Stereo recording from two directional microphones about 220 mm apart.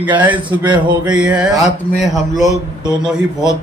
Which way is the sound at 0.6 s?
20° right (ahead or behind).